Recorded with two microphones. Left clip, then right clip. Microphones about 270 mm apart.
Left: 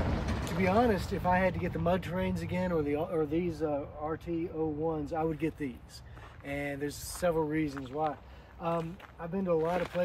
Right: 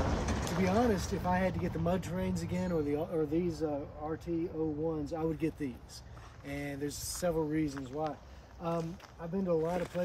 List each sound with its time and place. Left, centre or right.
0.1 s vehicle: right
0.7 s speech: centre